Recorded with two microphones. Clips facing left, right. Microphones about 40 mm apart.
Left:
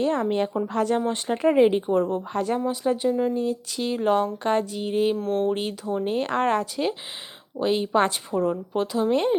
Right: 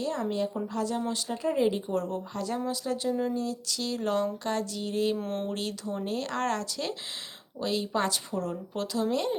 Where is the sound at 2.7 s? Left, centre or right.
Left.